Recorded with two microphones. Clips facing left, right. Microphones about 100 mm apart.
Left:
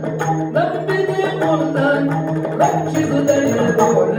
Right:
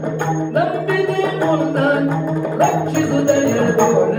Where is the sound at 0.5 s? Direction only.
15° left (ahead or behind).